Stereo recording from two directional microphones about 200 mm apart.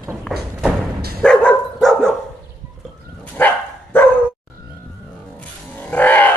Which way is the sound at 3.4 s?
10° left (ahead or behind).